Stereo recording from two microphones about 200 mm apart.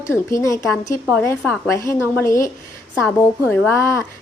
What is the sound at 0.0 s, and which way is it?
A woman's voice, 15° left (ahead or behind).